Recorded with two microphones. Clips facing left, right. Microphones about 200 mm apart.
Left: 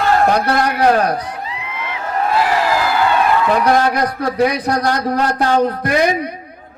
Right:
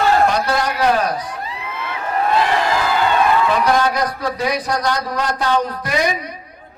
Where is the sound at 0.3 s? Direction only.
60° left (ahead or behind).